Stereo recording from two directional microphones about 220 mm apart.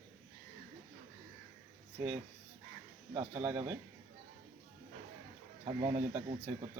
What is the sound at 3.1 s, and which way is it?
Speech, 15° right (ahead or behind).